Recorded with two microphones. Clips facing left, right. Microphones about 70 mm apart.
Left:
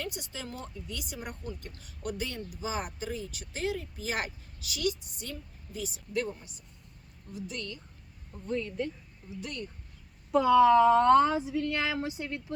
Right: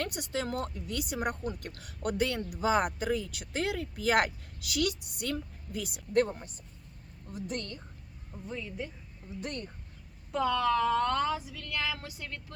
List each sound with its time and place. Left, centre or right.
0.0 s a woman's voice: right
8.4 s speech: centre
9.4 s speech: right
10.3 s speech: centre